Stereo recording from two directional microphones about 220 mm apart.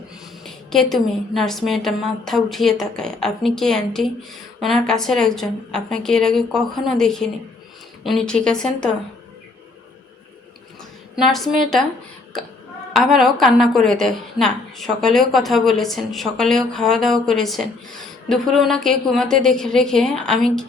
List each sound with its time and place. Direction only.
0.4 s a woman's voice: centre (ahead or behind)
11.1 s a woman's voice: centre (ahead or behind)
13.1 s a woman's voice: centre (ahead or behind)